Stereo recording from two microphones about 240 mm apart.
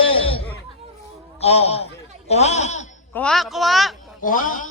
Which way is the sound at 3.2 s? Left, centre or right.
Centre.